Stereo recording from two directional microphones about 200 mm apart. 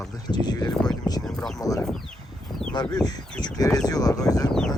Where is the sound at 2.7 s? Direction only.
20° left (ahead or behind).